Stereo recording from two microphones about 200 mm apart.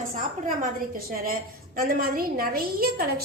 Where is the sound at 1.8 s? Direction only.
45° right (ahead or behind).